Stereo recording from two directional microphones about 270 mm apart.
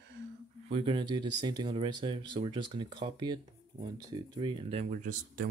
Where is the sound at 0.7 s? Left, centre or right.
Centre.